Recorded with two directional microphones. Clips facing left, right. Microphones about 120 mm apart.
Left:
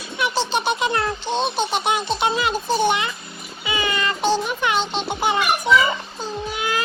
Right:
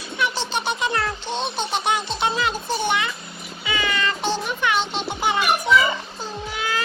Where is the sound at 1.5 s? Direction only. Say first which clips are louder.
Left 2 dB; 15° left (ahead or behind).